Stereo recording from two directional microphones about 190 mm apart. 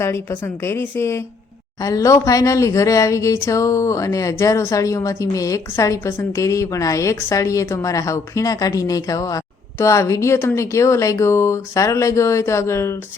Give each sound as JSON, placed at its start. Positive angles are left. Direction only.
{"t": 0.0, "sound": "speech", "side_deg": 15}